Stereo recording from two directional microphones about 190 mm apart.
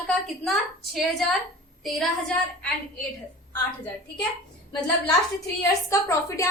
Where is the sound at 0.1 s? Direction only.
Centre (ahead or behind).